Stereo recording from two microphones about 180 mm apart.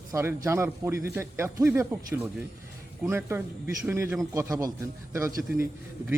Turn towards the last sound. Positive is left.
turn(degrees=-15)  # may be behind; listen again after turning